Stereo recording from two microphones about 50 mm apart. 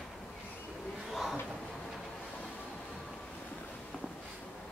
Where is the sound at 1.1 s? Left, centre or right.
Centre.